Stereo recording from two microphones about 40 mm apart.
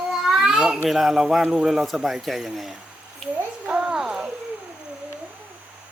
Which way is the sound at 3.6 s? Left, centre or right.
Right.